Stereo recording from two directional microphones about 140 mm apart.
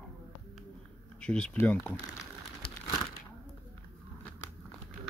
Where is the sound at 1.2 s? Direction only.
5° left (ahead or behind).